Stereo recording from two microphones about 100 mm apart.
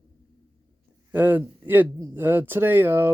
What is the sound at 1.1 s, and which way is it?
Speech, 20° right (ahead or behind).